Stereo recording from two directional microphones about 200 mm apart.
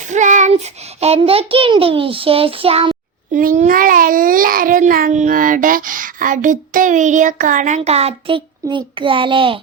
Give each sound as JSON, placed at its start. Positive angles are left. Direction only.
{"t": 0.1, "sound": "child singing", "side_deg": -35}
{"t": 0.9, "sound": "a child's voice", "side_deg": -30}
{"t": 3.3, "sound": "a child's voice", "side_deg": -40}